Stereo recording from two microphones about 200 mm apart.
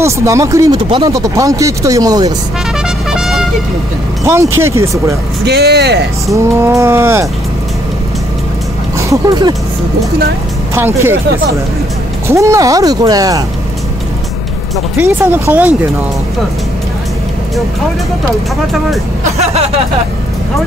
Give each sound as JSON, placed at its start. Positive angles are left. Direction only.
{"t": 0.0, "sound": "speech", "side_deg": -15}
{"t": 3.1, "sound": "vehicle", "side_deg": 0}
{"t": 4.2, "sound": "speech", "side_deg": -15}
{"t": 5.4, "sound": "speech", "side_deg": -55}
{"t": 6.3, "sound": "speech", "side_deg": -15}
{"t": 8.9, "sound": "speech", "side_deg": -20}
{"t": 12.3, "sound": "speech", "side_deg": -15}
{"t": 15.0, "sound": "speech", "side_deg": -10}
{"t": 19.3, "sound": "a sound", "side_deg": -30}